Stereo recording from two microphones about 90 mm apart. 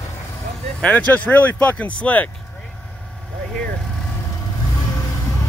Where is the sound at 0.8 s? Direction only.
15° left (ahead or behind).